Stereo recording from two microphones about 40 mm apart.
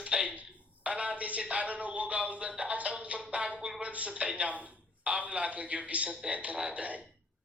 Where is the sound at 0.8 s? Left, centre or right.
Right.